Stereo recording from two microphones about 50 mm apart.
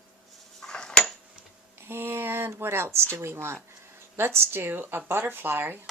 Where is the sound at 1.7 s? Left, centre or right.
Right.